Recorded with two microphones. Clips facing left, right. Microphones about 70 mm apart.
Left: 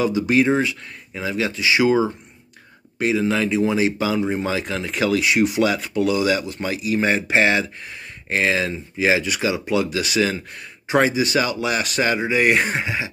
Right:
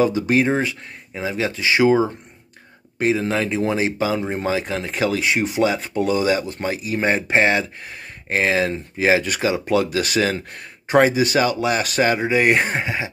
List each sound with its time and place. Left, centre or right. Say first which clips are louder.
0.0 s speech: even; right